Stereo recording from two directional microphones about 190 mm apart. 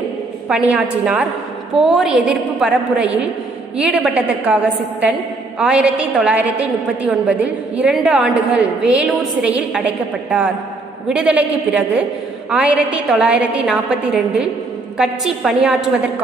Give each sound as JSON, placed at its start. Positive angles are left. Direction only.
{"t": 0.5, "sound": "a woman's voice", "side_deg": -10}
{"t": 5.6, "sound": "a woman's voice", "side_deg": -5}
{"t": 11.1, "sound": "a woman's voice", "side_deg": -5}